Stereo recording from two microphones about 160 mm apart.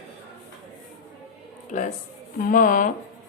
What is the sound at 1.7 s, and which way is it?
A woman's voice, 50° left (ahead or behind).